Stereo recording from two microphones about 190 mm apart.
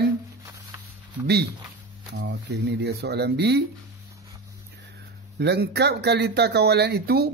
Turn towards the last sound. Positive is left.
turn(degrees=-55)  # may be behind; listen again after turning